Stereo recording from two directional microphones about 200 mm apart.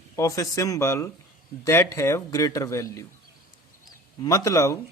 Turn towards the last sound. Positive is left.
turn(degrees=15)  # may be behind; listen again after turning